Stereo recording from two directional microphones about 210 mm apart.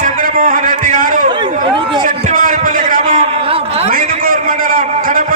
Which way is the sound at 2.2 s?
35° right (ahead or behind).